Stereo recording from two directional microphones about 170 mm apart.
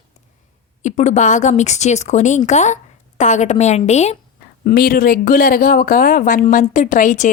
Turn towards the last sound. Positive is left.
turn(degrees=45)  # may be behind; listen again after turning